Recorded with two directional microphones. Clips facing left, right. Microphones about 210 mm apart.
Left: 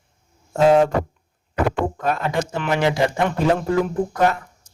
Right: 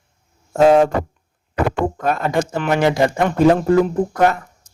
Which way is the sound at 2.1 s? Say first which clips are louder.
Right 5 dB; 45° right (ahead or behind).